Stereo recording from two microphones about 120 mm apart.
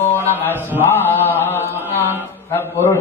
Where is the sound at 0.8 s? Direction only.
15° left (ahead or behind).